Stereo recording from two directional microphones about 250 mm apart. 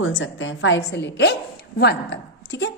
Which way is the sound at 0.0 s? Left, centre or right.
Left.